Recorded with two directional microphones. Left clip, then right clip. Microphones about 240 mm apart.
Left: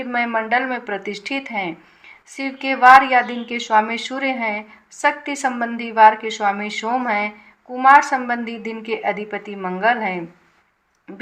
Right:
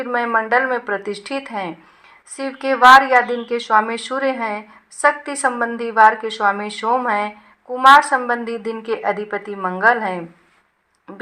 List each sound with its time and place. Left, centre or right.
0.0 s speech: centre